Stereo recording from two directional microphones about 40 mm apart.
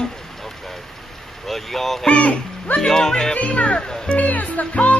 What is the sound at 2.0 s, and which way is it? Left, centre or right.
Speech, left.